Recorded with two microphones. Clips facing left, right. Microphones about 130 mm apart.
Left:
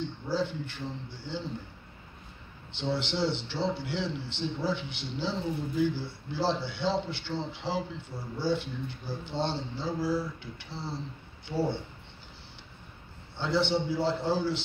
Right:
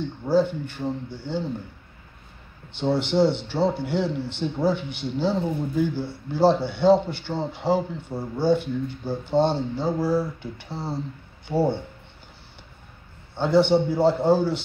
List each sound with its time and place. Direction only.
0.3 s a man's voice: 50° right (ahead or behind)
2.8 s a man's voice: 50° right (ahead or behind)
13.4 s a man's voice: 50° right (ahead or behind)